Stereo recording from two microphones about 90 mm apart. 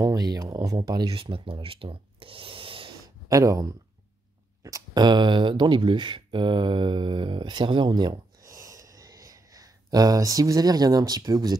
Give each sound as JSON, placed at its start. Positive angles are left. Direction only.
{"t": 0.0, "sound": "speech", "side_deg": -45}
{"t": 1.1, "sound": "speech", "side_deg": -85}
{"t": 3.3, "sound": "speech", "side_deg": -40}
{"t": 8.4, "sound": "a sound", "side_deg": -40}